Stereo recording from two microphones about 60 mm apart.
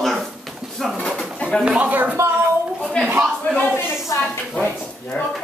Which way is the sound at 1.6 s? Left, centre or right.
Centre.